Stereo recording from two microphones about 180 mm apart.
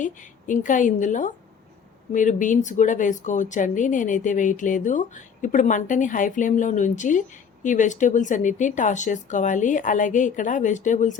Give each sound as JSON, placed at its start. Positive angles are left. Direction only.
{"t": 0.0, "sound": "speech", "side_deg": 45}